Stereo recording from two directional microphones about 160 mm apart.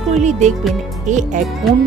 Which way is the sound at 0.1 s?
45° right (ahead or behind).